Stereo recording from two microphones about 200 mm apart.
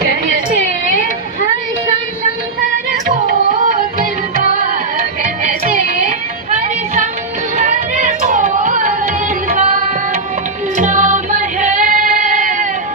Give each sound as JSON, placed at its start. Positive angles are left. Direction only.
{"t": 5.4, "sound": "music", "side_deg": -40}